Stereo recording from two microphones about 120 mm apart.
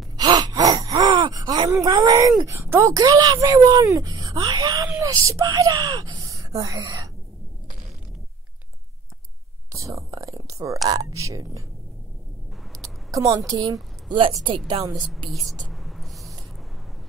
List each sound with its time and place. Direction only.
0.2 s gasp: 30° right (ahead or behind)
1.7 s speech: 30° right (ahead or behind)
9.7 s whispering: 25° right (ahead or behind)
10.9 s speech: 30° right (ahead or behind)
12.8 s speech: 30° right (ahead or behind)
15.2 s speech: centre (ahead or behind)
15.7 s a sound: centre (ahead or behind)